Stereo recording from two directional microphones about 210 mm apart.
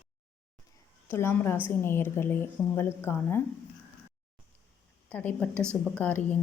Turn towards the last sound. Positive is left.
turn(degrees=10)  # may be behind; listen again after turning